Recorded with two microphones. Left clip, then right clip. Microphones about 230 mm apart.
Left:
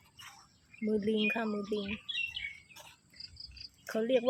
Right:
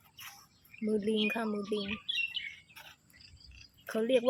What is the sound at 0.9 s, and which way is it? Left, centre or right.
Speech, centre.